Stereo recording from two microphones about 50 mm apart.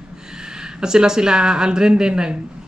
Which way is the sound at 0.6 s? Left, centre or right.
Centre.